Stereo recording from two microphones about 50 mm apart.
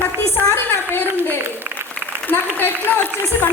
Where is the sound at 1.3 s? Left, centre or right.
Right.